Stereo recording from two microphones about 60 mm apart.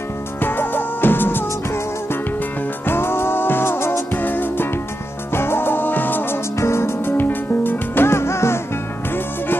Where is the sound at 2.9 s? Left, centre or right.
Left.